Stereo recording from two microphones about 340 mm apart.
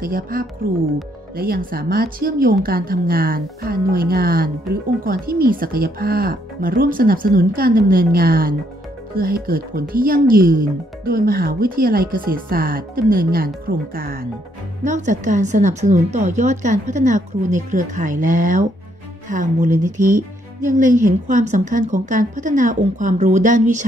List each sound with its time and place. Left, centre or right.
0.0 s speech: right